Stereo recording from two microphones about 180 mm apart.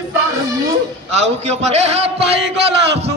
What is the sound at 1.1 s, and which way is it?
Speech, 40° right (ahead or behind).